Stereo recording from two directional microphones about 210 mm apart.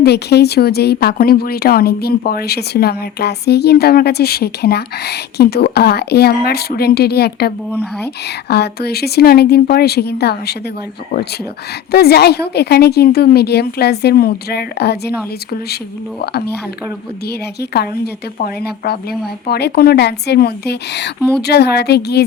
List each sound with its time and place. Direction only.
0.0 s a woman's voice: 50° left (ahead or behind)
11.9 s a woman's voice: 50° left (ahead or behind)
17.2 s a woman's voice: 50° left (ahead or behind)